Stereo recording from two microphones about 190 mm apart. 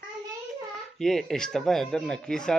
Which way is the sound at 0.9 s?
Centre (ahead or behind).